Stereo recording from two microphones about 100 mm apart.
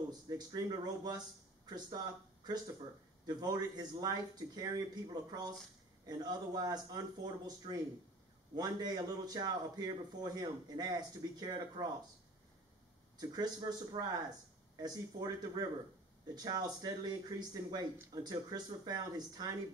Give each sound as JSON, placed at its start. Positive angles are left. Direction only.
{"t": 0.1, "sound": "a man's voice", "side_deg": -40}
{"t": 13.2, "sound": "a man's voice", "side_deg": -40}